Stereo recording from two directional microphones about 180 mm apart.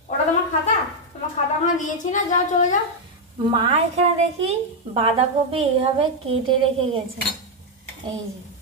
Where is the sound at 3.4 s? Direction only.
30° right (ahead or behind).